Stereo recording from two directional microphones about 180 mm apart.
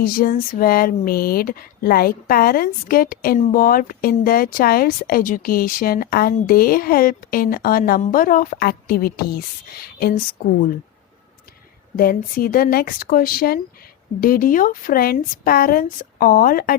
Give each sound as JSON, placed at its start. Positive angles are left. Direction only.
{"t": 0.0, "sound": "speech", "side_deg": 55}
{"t": 11.9, "sound": "a woman's voice", "side_deg": 55}